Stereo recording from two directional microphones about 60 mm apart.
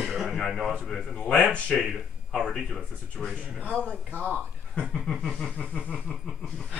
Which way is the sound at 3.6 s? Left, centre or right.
Right.